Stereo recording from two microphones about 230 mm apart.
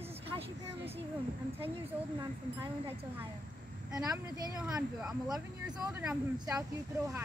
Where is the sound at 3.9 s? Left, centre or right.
Centre.